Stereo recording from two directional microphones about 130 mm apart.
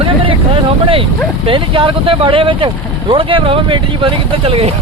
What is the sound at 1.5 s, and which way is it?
Speech, 40° right (ahead or behind).